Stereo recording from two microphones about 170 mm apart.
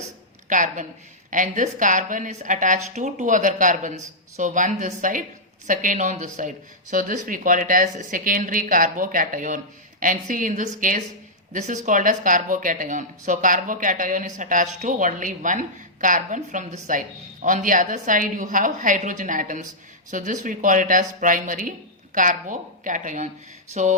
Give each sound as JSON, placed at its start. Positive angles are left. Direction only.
{"t": 0.4, "sound": "a woman's voice", "side_deg": -50}